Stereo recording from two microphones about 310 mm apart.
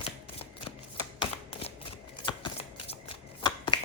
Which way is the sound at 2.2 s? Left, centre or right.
Centre.